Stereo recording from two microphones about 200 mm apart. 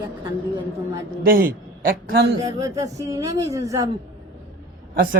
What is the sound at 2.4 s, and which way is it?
Speech, 20° right (ahead or behind).